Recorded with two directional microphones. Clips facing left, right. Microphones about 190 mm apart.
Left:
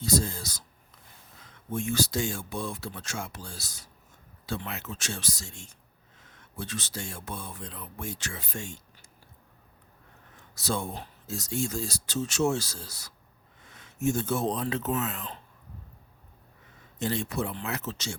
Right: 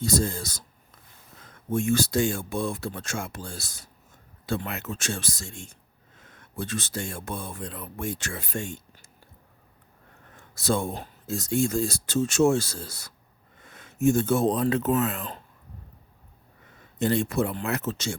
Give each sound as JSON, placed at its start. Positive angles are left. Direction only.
{"t": 0.0, "sound": "speech", "side_deg": -50}
{"t": 10.5, "sound": "speech", "side_deg": -50}
{"t": 17.0, "sound": "speech", "side_deg": -55}